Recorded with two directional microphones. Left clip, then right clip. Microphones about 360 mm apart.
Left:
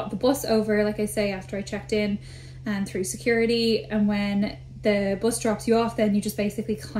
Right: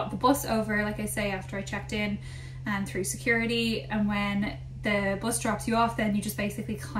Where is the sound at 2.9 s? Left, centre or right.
Right.